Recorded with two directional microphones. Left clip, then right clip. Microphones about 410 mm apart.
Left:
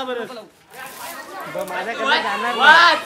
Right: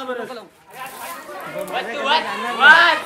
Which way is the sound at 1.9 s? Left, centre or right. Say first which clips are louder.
Even; centre.